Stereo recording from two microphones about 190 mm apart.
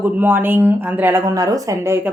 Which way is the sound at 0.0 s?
10° right (ahead or behind).